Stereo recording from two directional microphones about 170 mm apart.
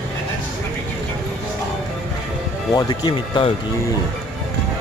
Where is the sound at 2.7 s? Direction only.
25° left (ahead or behind).